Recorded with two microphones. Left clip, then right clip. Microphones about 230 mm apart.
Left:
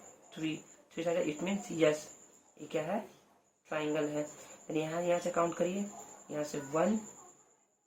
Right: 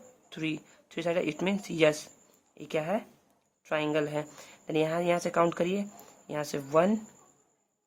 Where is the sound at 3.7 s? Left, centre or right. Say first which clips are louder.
Right 5 dB; right.